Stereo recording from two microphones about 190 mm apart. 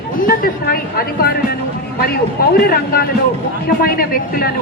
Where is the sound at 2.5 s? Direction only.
55° left (ahead or behind).